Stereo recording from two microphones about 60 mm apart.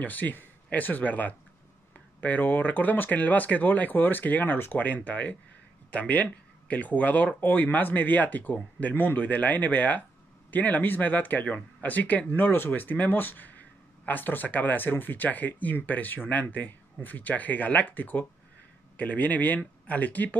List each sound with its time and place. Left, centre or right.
0.0 s speech: left